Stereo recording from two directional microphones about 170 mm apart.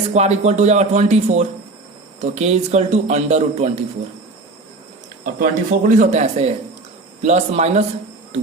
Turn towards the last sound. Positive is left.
turn(degrees=-40)  # may be behind; listen again after turning